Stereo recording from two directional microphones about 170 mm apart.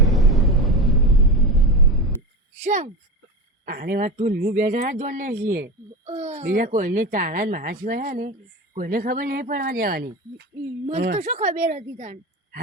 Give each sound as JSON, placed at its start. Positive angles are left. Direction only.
{"t": 0.0, "sound": "a sound", "side_deg": 0}
{"t": 2.6, "sound": "speech", "side_deg": -45}
{"t": 3.7, "sound": "a child's voice", "side_deg": -60}
{"t": 6.1, "sound": "a child's voice", "side_deg": -40}
{"t": 11.1, "sound": "a child's voice", "side_deg": -45}